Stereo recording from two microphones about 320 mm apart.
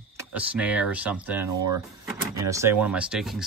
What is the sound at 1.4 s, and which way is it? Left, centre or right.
Speech, right.